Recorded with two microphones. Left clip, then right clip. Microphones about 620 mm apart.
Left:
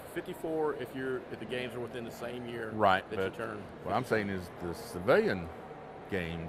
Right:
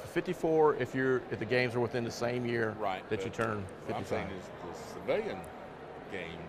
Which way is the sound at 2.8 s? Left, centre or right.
Left.